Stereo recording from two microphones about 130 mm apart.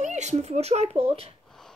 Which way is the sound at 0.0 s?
65° right (ahead or behind).